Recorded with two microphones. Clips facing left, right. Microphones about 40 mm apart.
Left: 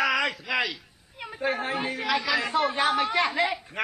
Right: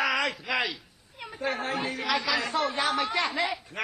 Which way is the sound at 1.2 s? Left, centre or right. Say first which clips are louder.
Left 3 dB; centre.